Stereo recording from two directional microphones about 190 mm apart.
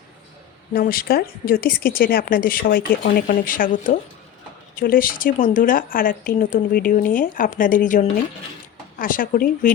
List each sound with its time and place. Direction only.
0.7 s speech: 50° left (ahead or behind)